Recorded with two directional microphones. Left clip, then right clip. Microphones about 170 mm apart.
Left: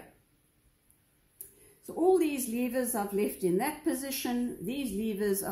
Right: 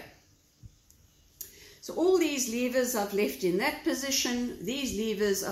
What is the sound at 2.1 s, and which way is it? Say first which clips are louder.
A woman's voice: right 1 dB; 50° left (ahead or behind).